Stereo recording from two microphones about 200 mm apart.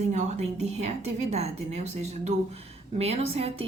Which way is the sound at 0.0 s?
35° right (ahead or behind).